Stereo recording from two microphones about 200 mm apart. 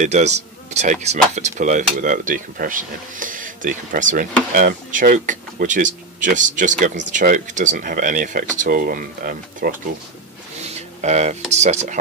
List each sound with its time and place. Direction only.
0.0 s speech: 35° right (ahead or behind)
10.6 s a sound: 35° right (ahead or behind)
11.5 s speech: 35° right (ahead or behind)